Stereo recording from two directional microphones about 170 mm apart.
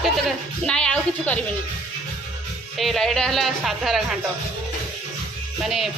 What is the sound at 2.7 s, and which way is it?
Speech, centre (ahead or behind).